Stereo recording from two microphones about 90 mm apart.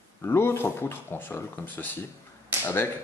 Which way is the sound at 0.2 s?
30° left (ahead or behind).